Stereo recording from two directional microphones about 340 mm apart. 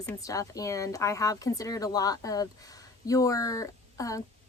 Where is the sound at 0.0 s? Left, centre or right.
Centre.